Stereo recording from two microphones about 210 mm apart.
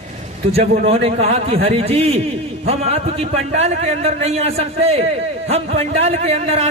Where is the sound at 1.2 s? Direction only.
30° right (ahead or behind).